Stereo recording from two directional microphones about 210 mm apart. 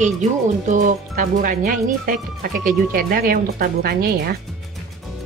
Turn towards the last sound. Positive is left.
turn(degrees=-45)  # may be behind; listen again after turning